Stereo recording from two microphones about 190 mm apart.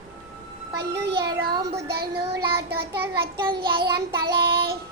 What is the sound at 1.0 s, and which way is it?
Child singing, 60° right (ahead or behind).